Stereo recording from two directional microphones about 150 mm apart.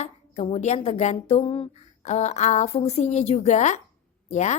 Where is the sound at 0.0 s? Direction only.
45° left (ahead or behind).